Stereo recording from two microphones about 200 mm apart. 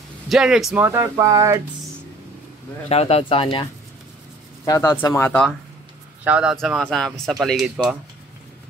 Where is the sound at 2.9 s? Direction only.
30° left (ahead or behind).